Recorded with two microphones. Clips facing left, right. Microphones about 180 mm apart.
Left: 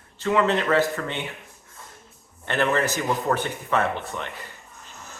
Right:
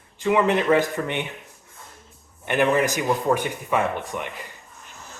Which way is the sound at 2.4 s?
15° right (ahead or behind).